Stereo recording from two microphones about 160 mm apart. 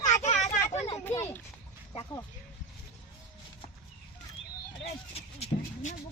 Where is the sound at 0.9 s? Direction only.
15° left (ahead or behind).